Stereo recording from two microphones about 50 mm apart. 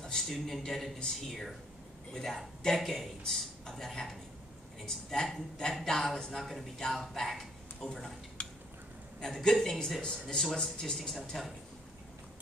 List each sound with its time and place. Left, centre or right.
0.0 s a man's voice: centre
7.9 s a man's voice: centre